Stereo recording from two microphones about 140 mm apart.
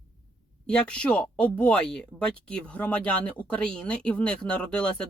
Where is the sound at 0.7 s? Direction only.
10° left (ahead or behind).